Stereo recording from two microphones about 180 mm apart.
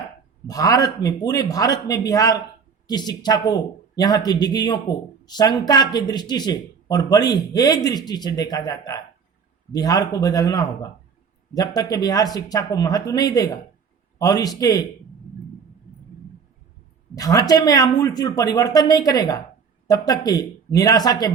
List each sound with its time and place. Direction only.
0.4 s speech: 20° left (ahead or behind)
17.2 s speech: 20° left (ahead or behind)